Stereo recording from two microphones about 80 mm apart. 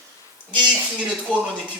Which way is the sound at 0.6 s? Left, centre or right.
Centre.